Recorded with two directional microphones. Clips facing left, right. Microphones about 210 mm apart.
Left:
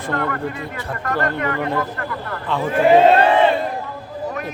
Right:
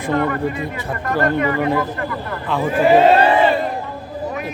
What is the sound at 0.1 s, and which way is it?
Speech, 15° right (ahead or behind).